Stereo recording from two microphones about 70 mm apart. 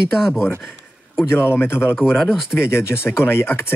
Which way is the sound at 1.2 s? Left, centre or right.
Left.